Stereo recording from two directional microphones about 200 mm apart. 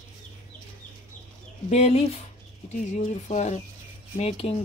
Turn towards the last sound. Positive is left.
turn(degrees=30)  # may be behind; listen again after turning